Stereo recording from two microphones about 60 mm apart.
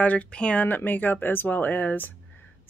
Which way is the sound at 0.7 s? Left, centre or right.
Left.